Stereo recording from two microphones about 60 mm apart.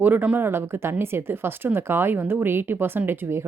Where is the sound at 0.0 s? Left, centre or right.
Right.